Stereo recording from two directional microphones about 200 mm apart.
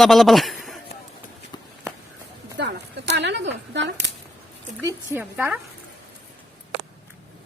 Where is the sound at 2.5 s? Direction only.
60° right (ahead or behind).